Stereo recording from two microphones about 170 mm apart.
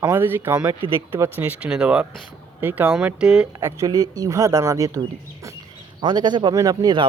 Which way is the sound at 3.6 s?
20° right (ahead or behind).